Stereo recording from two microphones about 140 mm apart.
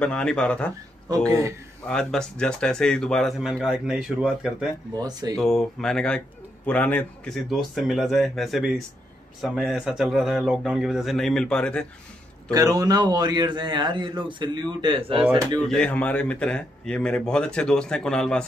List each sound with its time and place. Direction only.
0.0 s a man's voice: 5° left (ahead or behind)
1.9 s a man's voice: 5° left (ahead or behind)
4.9 s speech: 30° right (ahead or behind)
5.4 s a man's voice: 5° left (ahead or behind)
12.4 s a man's voice: 25° right (ahead or behind)
15.7 s a man's voice: 10° left (ahead or behind)